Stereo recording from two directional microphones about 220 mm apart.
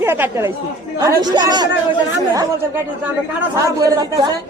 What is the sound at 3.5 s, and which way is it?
Speech, 15° right (ahead or behind).